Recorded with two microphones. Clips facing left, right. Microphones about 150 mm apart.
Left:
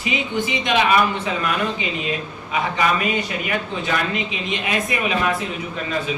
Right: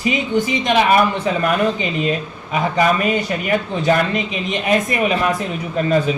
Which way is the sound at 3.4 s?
45° right (ahead or behind).